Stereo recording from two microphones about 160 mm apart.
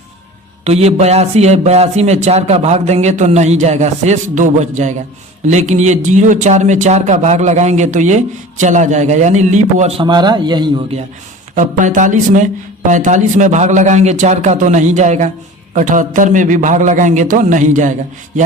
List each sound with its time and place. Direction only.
0.6 s speech: 40° right (ahead or behind)
10.0 s a man's voice: 25° right (ahead or behind)
11.5 s speech: 55° right (ahead or behind)